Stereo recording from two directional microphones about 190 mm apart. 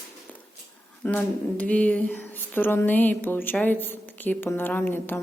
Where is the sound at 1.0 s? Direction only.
10° left (ahead or behind).